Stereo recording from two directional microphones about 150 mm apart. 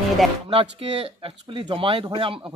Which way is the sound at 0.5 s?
40° right (ahead or behind).